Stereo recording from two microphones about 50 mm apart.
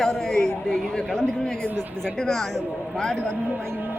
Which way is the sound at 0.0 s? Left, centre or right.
Centre.